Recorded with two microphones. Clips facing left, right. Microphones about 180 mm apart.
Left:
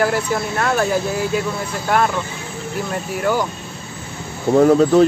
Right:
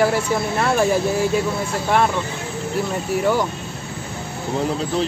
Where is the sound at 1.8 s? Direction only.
Centre (ahead or behind).